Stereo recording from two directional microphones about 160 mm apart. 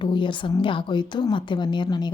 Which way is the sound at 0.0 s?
30° left (ahead or behind).